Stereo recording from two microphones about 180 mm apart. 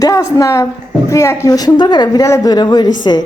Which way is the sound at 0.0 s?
20° left (ahead or behind).